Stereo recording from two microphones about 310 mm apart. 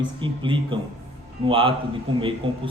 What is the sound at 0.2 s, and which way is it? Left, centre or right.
A man's voice, centre.